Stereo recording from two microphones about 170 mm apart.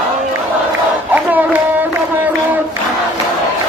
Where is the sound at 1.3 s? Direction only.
10° right (ahead or behind).